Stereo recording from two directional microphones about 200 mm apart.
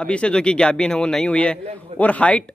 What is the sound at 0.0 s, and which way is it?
A man's voice, 5° left (ahead or behind).